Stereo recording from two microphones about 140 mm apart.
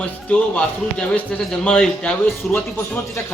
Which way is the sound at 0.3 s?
10° left (ahead or behind).